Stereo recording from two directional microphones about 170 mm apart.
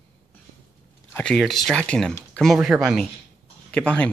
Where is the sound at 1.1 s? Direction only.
5° left (ahead or behind).